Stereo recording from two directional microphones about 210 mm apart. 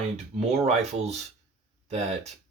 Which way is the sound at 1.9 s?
30° right (ahead or behind).